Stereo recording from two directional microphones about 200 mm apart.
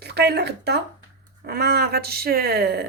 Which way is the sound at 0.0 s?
55° right (ahead or behind).